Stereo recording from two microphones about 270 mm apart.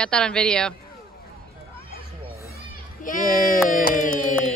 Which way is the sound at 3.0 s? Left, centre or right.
Left.